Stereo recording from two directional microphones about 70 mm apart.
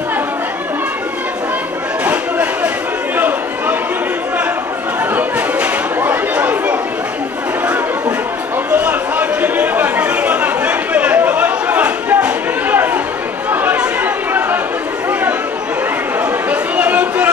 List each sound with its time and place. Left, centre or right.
2.0 s a sound: centre
6.3 s chatter: centre
8.7 s chatter: right
16.4 s chatter: right